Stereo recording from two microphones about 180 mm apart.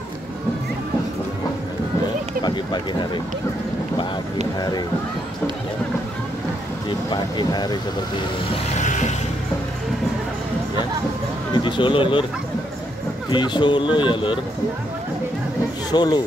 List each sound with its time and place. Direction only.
2.4 s a sound: 25° left (ahead or behind)
4.6 s speech: 20° left (ahead or behind)
7.1 s speech: 25° left (ahead or behind)
8.7 s music: 40° left (ahead or behind)
11.5 s speech: 25° left (ahead or behind)
13.3 s speech: 25° left (ahead or behind)
15.9 s speech: 25° left (ahead or behind)